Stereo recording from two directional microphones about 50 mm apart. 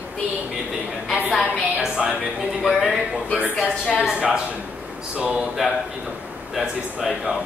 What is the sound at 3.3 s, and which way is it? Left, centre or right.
Speech, left.